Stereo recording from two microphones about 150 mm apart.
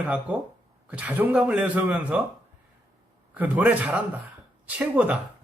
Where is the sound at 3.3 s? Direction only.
10° right (ahead or behind).